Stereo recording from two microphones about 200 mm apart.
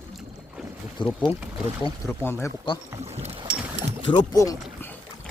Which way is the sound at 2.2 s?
15° left (ahead or behind).